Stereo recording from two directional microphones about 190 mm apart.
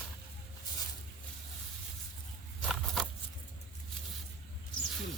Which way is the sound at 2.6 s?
Centre (ahead or behind).